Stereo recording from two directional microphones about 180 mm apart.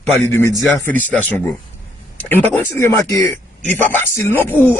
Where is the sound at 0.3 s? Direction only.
15° left (ahead or behind).